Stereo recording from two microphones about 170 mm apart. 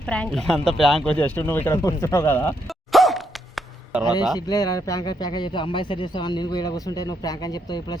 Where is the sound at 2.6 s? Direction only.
Centre (ahead or behind).